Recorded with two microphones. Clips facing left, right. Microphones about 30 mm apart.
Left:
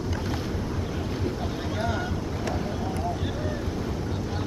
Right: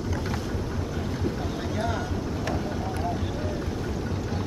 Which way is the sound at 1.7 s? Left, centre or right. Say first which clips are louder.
Even; centre.